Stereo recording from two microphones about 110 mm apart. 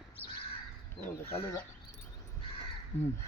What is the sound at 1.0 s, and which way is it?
Speech, 60° left (ahead or behind).